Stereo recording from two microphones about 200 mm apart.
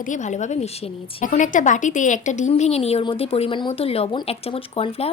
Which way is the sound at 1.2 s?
40° left (ahead or behind).